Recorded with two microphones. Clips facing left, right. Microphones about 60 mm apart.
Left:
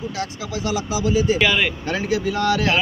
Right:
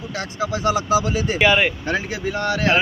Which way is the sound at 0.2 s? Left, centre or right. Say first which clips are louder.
Right 6 dB; right.